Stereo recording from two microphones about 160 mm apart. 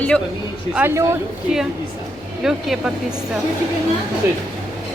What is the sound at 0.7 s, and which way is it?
Speech, 10° right (ahead or behind).